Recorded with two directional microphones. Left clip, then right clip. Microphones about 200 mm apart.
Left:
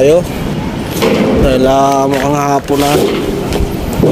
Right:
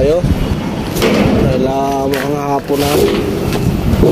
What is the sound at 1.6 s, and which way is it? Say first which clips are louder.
Speech: left 6 dB; 35° left (ahead or behind).